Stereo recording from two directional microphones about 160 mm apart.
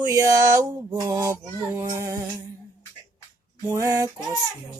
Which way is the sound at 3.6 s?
20° right (ahead or behind).